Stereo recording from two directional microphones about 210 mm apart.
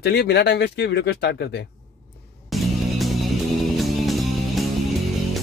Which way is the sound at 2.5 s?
Centre (ahead or behind).